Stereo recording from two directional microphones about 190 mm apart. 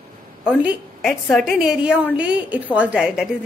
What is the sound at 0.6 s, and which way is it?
A woman's voice, centre (ahead or behind).